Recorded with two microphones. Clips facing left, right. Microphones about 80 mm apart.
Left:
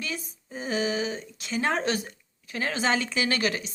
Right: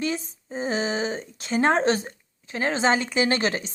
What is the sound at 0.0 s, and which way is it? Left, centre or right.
Speech, right.